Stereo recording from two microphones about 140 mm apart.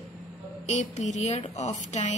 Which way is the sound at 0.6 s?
55° left (ahead or behind).